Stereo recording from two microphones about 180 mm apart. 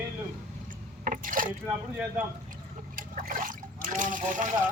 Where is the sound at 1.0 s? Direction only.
50° right (ahead or behind).